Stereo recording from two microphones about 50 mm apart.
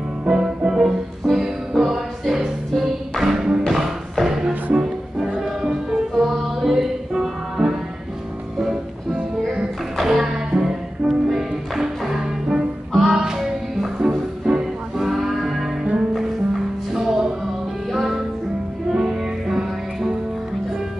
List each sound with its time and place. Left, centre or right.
0.3 s music: centre
3.6 s music: centre
6.1 s music: centre
9.9 s music: centre
12.9 s music: centre
16.9 s music: centre